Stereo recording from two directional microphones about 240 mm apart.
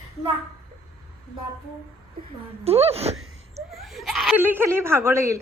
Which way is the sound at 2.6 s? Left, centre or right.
Right.